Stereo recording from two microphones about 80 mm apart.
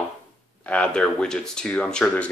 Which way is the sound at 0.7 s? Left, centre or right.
Centre.